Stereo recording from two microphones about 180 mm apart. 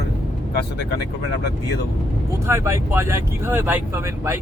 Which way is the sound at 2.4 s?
15° right (ahead or behind).